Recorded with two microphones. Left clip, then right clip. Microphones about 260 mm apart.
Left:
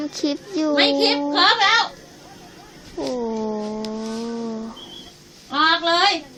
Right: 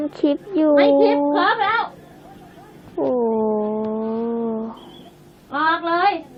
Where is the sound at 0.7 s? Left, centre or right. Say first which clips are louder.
Right 3 dB; left.